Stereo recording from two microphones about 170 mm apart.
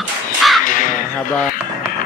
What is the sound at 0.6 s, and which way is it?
Crow, 55° left (ahead or behind).